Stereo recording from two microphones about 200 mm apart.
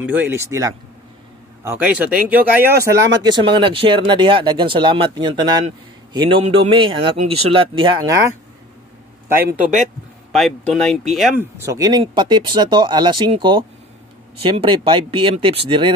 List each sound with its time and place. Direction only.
0.0 s speech: 10° right (ahead or behind)
10.3 s speech: centre (ahead or behind); by 15.9 s 25° right (ahead or behind)